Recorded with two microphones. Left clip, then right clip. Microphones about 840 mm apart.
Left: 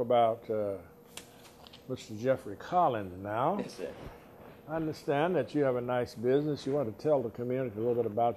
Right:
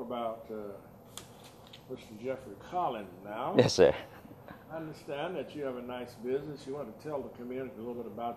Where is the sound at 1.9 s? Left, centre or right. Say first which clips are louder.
Left 8 dB; left.